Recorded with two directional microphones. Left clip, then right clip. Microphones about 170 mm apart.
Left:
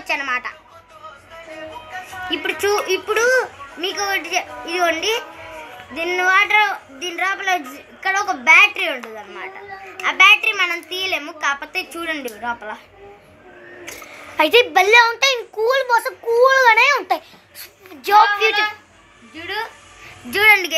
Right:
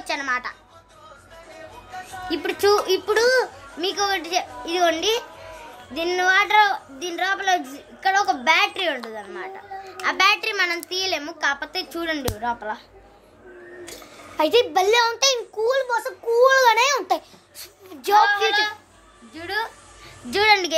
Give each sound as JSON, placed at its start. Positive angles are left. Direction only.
{"t": 0.0, "sound": "speech", "side_deg": -20}
{"t": 2.3, "sound": "a child's voice", "side_deg": -30}
{"t": 11.1, "sound": "a child's voice", "side_deg": -25}
{"t": 14.3, "sound": "a child's voice", "side_deg": -5}
{"t": 16.3, "sound": "a child's voice", "side_deg": -15}
{"t": 20.2, "sound": "a child's voice", "side_deg": -25}